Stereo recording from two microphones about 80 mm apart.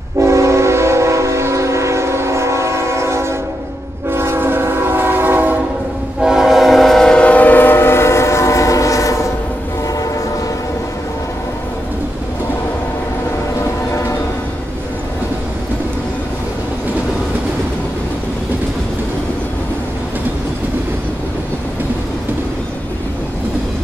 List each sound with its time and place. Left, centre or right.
0.2 s train: right
6.2 s train: centre; by 9.3 s left